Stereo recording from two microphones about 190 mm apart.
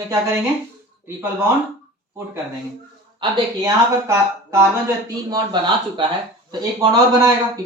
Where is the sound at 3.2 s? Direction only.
25° right (ahead or behind).